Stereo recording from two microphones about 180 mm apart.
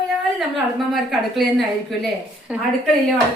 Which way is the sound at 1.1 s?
Centre (ahead or behind).